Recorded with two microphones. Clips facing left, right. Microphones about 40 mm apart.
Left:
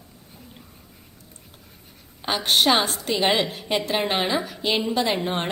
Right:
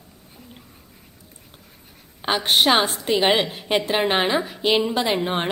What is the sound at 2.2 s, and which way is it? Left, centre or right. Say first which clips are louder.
A woman's voice: right 2 dB; centre.